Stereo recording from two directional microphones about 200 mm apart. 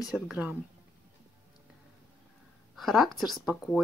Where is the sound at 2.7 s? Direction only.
Centre (ahead or behind).